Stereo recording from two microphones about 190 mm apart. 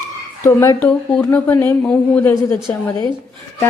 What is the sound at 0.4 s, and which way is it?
A woman's voice, 15° left (ahead or behind).